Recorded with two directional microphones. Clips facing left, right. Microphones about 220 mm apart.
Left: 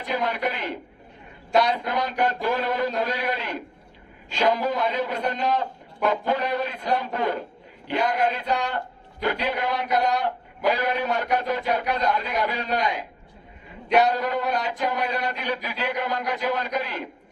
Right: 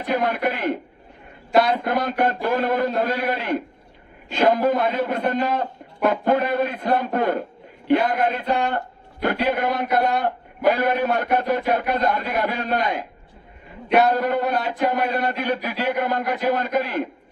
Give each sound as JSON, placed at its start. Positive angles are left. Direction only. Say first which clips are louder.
{"t": 0.0, "sound": "a man's voice", "louder": "right 4 dB", "side_deg": -50}
{"t": 8.4, "sound": "a man's voice", "louder": "right 4 dB", "side_deg": 0}
{"t": 9.2, "sound": "a man's voice", "louder": "right 4 dB", "side_deg": -50}
{"t": 10.0, "sound": "a man's voice", "louder": "right 2 dB", "side_deg": 0}
{"t": 10.2, "sound": "a man's voice", "louder": "right 4 dB", "side_deg": -50}
{"t": 13.8, "sound": "a man's voice", "louder": "right 2 dB", "side_deg": 0}
{"t": 14.1, "sound": "a man's voice", "louder": "right 4 dB", "side_deg": -50}